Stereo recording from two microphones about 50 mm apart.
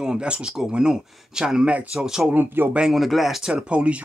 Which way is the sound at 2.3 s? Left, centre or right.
Right.